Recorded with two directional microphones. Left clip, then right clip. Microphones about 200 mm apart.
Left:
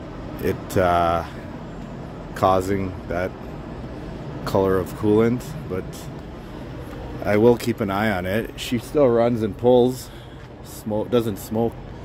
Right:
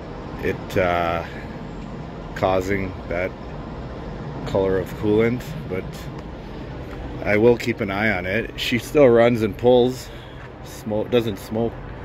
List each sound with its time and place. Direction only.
0.5 s speech: 20° left (ahead or behind)
2.4 s speech: 15° left (ahead or behind)
4.5 s speech: 30° left (ahead or behind)
4.7 s speech: 15° left (ahead or behind)
7.2 s speech: 15° left (ahead or behind)
8.9 s speech: 5° right (ahead or behind)
9.7 s speech: 15° left (ahead or behind)